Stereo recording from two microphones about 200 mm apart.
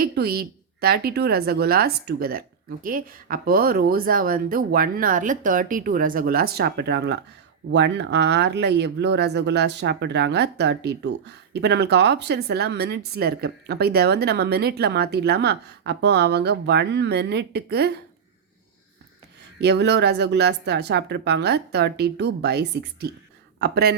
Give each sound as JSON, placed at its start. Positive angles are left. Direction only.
{"t": 0.0, "sound": "a woman's voice", "side_deg": -50}
{"t": 19.5, "sound": "a woman's voice", "side_deg": -55}